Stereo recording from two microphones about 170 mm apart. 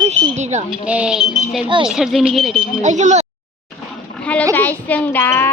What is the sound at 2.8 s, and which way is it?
Speech, 45° right (ahead or behind).